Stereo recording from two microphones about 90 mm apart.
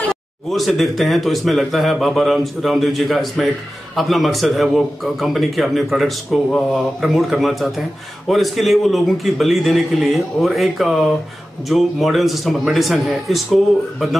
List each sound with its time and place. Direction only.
0.1 s a man's voice: centre (ahead or behind)